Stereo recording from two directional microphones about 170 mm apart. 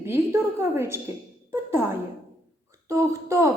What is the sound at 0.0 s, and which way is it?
A woman's voice, 15° right (ahead or behind).